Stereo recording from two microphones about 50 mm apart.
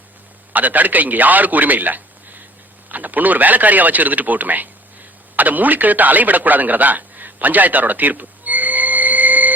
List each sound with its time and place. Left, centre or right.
0.5 s a man's voice: right